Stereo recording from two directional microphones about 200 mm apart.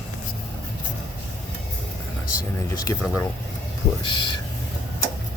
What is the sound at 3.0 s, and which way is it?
Speech, 5° left (ahead or behind).